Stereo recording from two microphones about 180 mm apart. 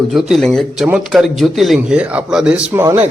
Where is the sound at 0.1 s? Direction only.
Centre (ahead or behind).